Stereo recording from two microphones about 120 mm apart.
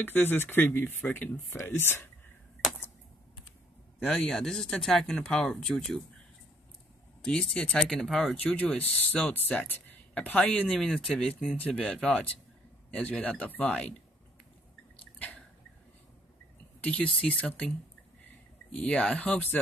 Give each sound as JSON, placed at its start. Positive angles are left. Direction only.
{"t": 0.0, "sound": "speech", "side_deg": 15}
{"t": 4.0, "sound": "speech", "side_deg": 10}
{"t": 7.2, "sound": "speech", "side_deg": 10}
{"t": 15.1, "sound": "a sound", "side_deg": 15}
{"t": 16.8, "sound": "speech", "side_deg": 10}